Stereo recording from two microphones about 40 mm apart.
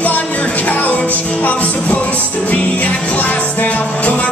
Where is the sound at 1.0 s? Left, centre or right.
Left.